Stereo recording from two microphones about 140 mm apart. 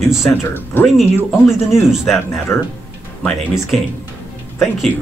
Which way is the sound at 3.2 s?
Centre (ahead or behind).